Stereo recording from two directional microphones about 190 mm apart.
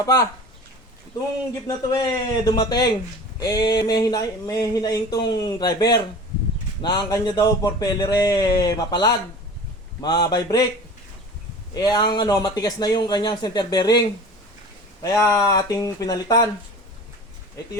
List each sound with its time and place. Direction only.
0.0 s speech: 15° left (ahead or behind)
1.6 s speech: 20° left (ahead or behind)
11.7 s speech: 20° left (ahead or behind)
15.0 s speech: 15° left (ahead or behind)